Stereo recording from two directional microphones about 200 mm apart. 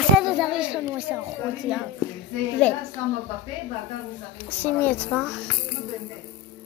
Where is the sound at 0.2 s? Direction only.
5° right (ahead or behind).